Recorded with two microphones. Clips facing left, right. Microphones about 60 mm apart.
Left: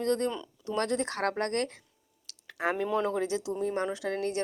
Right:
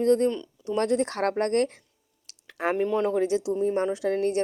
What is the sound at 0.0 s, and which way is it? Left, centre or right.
A woman's voice, right.